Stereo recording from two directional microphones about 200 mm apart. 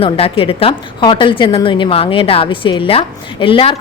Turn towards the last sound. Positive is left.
turn(degrees=25)  # may be behind; listen again after turning